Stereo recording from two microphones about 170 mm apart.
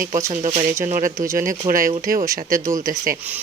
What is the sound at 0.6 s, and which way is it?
Speech, 15° right (ahead or behind).